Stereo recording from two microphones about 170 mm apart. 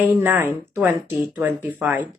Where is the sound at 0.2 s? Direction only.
10° right (ahead or behind).